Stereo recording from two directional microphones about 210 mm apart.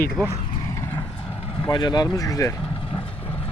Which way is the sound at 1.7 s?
20° left (ahead or behind).